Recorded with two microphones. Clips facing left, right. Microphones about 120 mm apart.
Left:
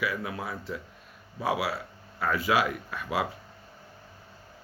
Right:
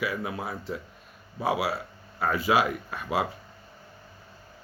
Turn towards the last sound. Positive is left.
turn(degrees=-30)  # may be behind; listen again after turning